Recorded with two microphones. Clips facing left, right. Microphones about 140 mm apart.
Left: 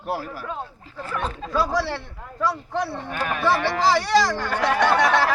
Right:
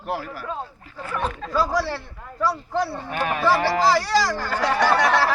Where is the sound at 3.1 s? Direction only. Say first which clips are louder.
Right 2 dB; 30° right (ahead or behind).